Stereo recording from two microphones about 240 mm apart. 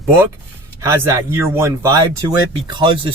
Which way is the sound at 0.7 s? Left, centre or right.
Centre.